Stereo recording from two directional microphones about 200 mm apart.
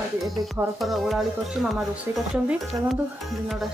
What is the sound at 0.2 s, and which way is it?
Speech, centre (ahead or behind).